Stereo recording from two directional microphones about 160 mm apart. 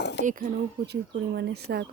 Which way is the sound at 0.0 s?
90° left.